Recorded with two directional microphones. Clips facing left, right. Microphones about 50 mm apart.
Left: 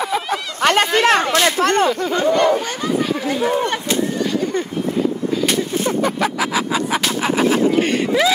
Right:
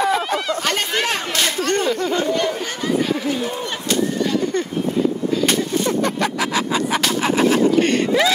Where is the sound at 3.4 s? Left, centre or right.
Left.